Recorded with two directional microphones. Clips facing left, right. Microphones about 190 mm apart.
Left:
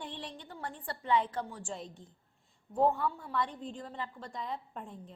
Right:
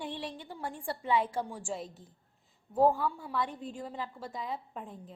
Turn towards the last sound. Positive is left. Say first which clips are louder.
# right 1 dB
turn(degrees=0)  # may be behind; listen again after turning